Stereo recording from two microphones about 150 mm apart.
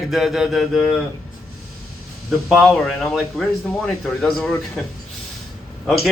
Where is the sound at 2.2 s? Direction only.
Centre (ahead or behind).